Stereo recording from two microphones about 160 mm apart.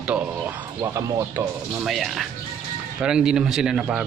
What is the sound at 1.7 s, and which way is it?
Speech, centre (ahead or behind).